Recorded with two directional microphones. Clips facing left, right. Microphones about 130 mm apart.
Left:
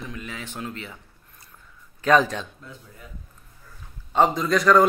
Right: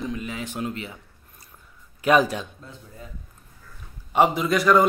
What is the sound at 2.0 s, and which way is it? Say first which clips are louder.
Speech: even; 10° right (ahead or behind).